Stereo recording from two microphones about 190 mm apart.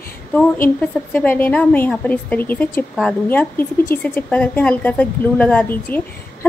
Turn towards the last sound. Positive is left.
turn(degrees=10)  # may be behind; listen again after turning